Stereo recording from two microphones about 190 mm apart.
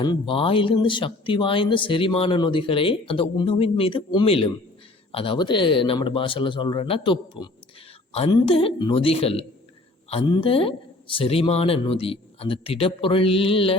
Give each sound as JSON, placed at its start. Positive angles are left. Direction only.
{"t": 0.0, "sound": "speech", "side_deg": 25}